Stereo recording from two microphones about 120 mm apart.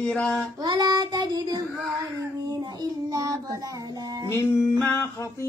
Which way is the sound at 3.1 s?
30° right (ahead or behind).